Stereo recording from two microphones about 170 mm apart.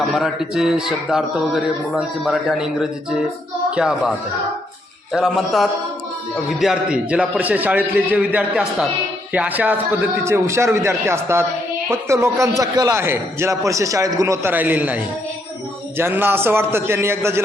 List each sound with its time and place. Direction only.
0.1 s a man's voice: centre (ahead or behind)
5.1 s a man's voice: centre (ahead or behind)